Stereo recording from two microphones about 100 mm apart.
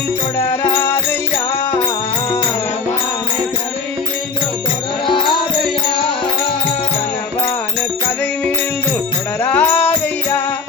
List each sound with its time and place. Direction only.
0.3 s music: 20° left (ahead or behind)
9.4 s music: 15° left (ahead or behind)